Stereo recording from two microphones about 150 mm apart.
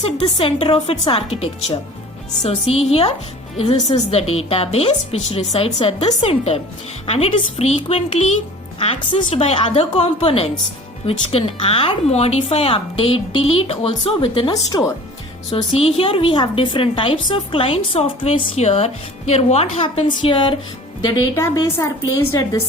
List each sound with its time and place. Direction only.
0.0 s a woman's voice: 40° left (ahead or behind)
14.5 s a woman's voice: 25° left (ahead or behind)
15.8 s a woman's voice: 40° left (ahead or behind)
21.3 s a woman's voice: 20° left (ahead or behind)